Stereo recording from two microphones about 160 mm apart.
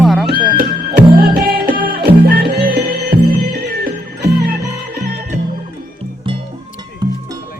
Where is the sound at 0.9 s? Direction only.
70° right (ahead or behind).